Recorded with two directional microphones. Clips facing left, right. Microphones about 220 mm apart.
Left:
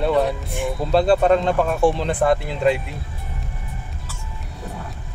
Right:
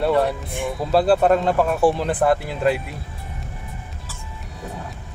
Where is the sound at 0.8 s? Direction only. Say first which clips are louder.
Even; 5° right (ahead or behind).